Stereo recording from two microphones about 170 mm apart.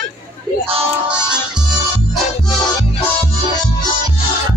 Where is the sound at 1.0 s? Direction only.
5° right (ahead or behind).